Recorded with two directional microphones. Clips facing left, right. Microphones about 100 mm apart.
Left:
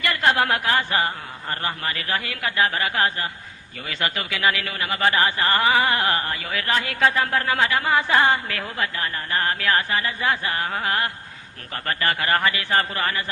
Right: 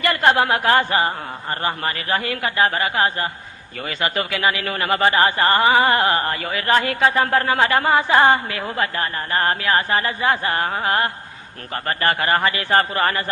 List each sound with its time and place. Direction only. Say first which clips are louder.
0.0 s a man's voice: right 4 dB; 40° right (ahead or behind)
0.9 s a man's voice: right 4 dB; 30° right (ahead or behind)
4.1 s a man's voice: right 2 dB; 40° right (ahead or behind)
5.5 s a man's voice: right 3 dB; 30° right (ahead or behind); by 7.9 s 45° right (ahead or behind)
7.9 s a woman's voice: right 3 dB; 25° right (ahead or behind)
8.7 s a man's voice: right 5 dB; 40° right (ahead or behind)
9.6 s a woman's voice: right 2 dB; 25° right (ahead or behind)
9.9 s a man's voice: right 4 dB; 35° right (ahead or behind)